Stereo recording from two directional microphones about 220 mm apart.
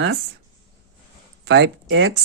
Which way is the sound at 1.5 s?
55° right (ahead or behind).